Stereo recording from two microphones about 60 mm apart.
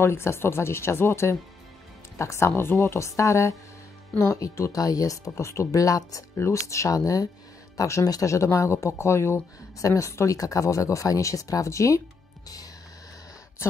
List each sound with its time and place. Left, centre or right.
0.0 s speech: left
3.2 s speech: left
6.5 s speech: left
9.8 s speech: left
13.6 s speech: left